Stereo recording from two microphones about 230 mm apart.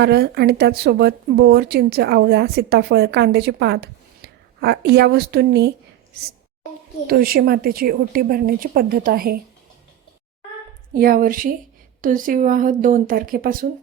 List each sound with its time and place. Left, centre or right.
0.0 s a woman's voice: right
7.1 s a woman's voice: right
10.9 s a woman's voice: right